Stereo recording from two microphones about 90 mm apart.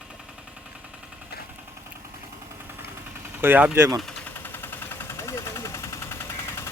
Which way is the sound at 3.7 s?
40° right (ahead or behind).